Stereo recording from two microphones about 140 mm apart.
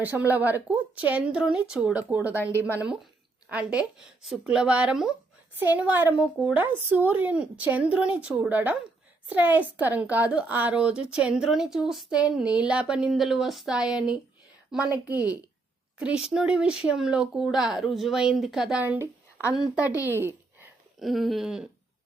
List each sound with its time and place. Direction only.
0.0 s a woman's voice: 10° right (ahead or behind)
16.0 s a woman's voice: 5° right (ahead or behind)
20.1 s a sound: 15° right (ahead or behind)
21.0 s speech: centre (ahead or behind)